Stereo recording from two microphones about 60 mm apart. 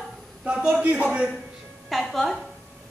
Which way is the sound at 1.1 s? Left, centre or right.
Centre.